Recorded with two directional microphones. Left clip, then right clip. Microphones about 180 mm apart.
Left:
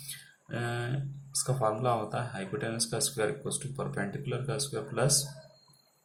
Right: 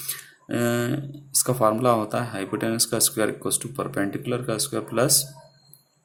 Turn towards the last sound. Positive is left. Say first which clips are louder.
# right 8 dB
turn(degrees=-50)  # may be behind; listen again after turning